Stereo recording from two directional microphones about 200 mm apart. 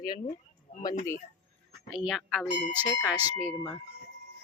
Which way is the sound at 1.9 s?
Centre (ahead or behind).